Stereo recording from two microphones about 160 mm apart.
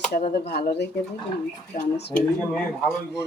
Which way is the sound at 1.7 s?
60° left (ahead or behind).